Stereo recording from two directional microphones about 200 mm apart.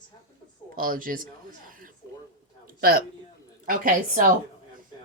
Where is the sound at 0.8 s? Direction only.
45° right (ahead or behind).